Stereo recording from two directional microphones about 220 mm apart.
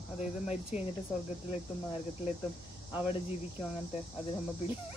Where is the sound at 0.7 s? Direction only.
30° left (ahead or behind).